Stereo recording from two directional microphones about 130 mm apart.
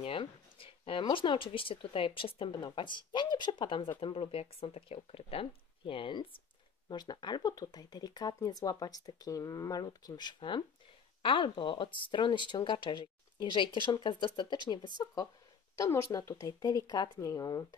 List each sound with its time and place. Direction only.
0.0 s speech: 45° left (ahead or behind); by 17.6 s 25° left (ahead or behind)